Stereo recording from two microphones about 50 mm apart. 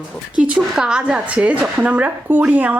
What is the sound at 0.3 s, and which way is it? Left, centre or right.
Speech, right.